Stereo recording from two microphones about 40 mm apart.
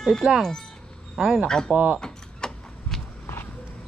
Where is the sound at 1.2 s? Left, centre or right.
Centre.